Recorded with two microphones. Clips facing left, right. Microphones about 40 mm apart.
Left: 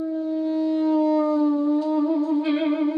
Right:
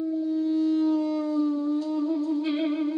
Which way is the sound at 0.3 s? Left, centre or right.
Centre.